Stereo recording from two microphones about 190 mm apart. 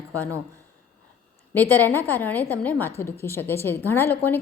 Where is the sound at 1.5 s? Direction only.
10° left (ahead or behind).